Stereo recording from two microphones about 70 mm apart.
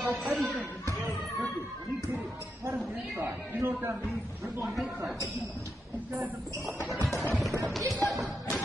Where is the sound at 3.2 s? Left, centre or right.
Right.